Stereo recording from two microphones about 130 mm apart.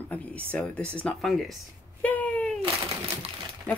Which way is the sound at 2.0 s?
10° left (ahead or behind).